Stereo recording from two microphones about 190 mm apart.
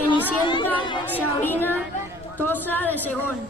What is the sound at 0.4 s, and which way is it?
Speech, 25° left (ahead or behind).